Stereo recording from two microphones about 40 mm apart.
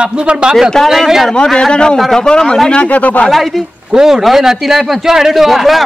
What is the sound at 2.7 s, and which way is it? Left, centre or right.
Speech, left.